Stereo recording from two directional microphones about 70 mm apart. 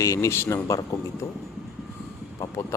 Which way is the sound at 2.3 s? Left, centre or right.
Left.